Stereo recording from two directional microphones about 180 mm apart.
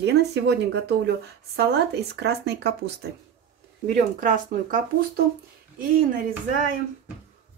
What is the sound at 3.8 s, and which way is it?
Speech, 45° right (ahead or behind).